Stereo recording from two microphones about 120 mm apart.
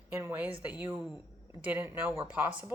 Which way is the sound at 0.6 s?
15° right (ahead or behind).